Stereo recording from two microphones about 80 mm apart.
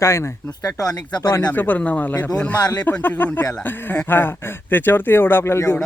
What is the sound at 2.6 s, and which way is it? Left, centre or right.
Speech, left.